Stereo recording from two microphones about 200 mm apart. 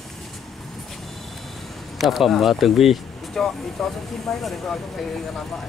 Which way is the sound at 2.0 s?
Centre (ahead or behind).